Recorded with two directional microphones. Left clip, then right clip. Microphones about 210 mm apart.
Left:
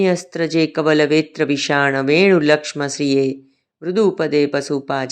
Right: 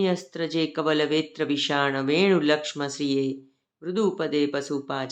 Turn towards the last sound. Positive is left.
turn(degrees=25)  # may be behind; listen again after turning